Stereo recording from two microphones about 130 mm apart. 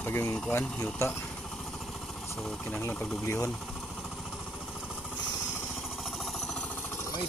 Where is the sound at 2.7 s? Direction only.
15° left (ahead or behind).